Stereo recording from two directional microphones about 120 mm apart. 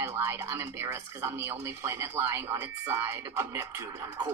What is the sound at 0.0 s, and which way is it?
Music, 20° right (ahead or behind).